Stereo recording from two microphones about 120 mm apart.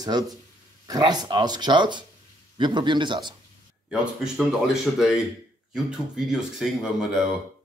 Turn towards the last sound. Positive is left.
turn(degrees=-5)  # may be behind; listen again after turning